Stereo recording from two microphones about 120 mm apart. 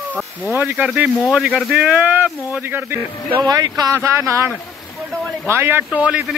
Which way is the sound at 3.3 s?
35° right (ahead or behind).